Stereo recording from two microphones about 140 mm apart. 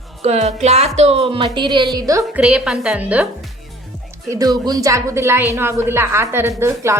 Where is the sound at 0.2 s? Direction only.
50° right (ahead or behind); by 2.2 s 25° right (ahead or behind).